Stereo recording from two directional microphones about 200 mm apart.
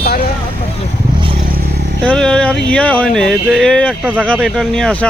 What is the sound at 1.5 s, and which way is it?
Vehicle, 50° right (ahead or behind).